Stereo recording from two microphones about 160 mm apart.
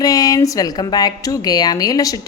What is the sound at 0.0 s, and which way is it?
Speech, 20° left (ahead or behind).